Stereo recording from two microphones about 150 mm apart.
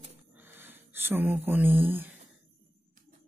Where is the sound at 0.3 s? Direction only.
10° right (ahead or behind).